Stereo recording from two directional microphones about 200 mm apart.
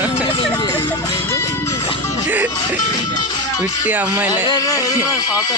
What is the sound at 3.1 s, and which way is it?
Music, 20° left (ahead or behind).